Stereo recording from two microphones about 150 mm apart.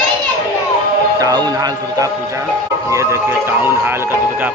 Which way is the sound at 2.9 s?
20° right (ahead or behind).